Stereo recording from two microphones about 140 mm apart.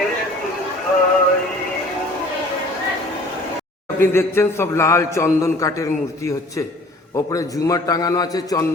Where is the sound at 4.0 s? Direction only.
15° left (ahead or behind).